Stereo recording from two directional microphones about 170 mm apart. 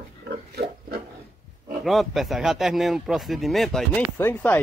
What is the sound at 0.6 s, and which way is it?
Pig, 70° right (ahead or behind).